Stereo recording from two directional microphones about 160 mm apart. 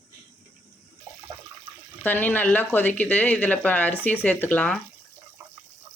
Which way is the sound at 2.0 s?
10° left (ahead or behind).